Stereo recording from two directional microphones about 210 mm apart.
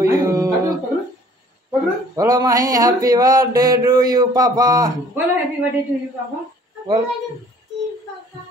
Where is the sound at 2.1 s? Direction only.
15° right (ahead or behind).